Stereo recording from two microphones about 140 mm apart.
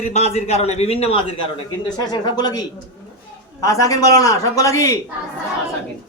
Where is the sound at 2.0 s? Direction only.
30° left (ahead or behind).